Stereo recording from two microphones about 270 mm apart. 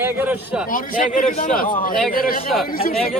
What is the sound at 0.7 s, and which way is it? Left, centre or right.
Speech, left.